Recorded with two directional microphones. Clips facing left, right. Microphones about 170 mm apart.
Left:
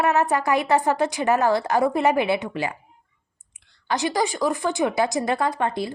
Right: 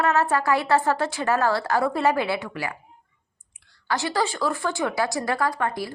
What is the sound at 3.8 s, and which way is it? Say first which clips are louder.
A woman's voice: left 2 dB; 20° left (ahead or behind).